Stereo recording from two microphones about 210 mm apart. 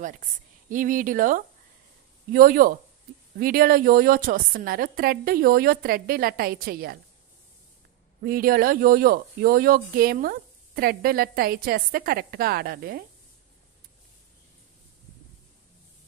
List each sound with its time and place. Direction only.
0.7 s speech: 40° right (ahead or behind)
8.2 s speech: 45° right (ahead or behind)